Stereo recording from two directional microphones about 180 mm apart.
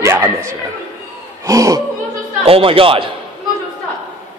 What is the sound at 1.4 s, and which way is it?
Speech, 20° right (ahead or behind).